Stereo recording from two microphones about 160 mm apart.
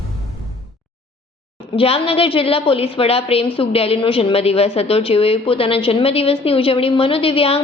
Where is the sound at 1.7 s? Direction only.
35° left (ahead or behind).